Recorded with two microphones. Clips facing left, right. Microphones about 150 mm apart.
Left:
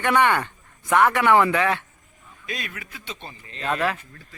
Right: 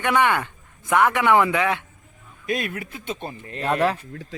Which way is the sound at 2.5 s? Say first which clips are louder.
Right 8 dB; 50° right (ahead or behind).